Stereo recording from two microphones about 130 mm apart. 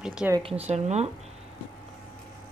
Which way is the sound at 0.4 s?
50° right (ahead or behind).